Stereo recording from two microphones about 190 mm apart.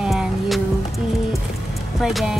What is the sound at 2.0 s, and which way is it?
Speech, centre (ahead or behind).